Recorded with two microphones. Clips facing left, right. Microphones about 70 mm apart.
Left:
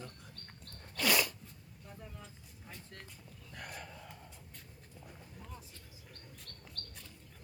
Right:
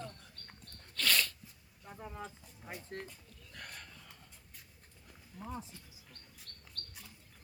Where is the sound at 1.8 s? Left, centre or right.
Right.